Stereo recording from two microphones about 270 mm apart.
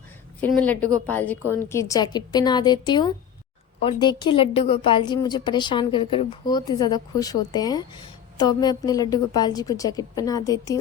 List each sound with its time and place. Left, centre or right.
0.6 s a woman's voice: centre